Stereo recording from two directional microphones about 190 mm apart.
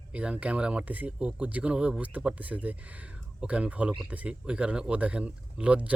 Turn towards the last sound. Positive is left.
turn(degrees=-5)  # may be behind; listen again after turning